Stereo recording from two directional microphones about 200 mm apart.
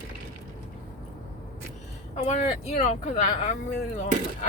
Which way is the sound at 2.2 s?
35° left (ahead or behind).